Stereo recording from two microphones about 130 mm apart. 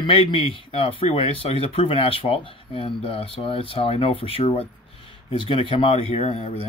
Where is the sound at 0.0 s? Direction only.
40° left (ahead or behind).